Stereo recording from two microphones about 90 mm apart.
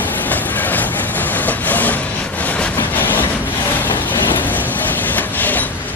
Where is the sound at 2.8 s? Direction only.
25° left (ahead or behind).